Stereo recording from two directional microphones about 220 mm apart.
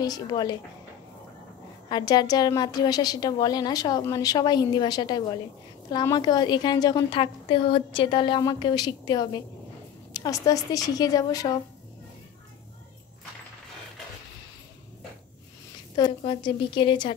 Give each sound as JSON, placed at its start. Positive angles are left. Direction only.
{"t": 0.0, "sound": "a woman's voice", "side_deg": 15}
{"t": 1.9, "sound": "a woman's voice", "side_deg": 20}
{"t": 16.0, "sound": "a woman's voice", "side_deg": 25}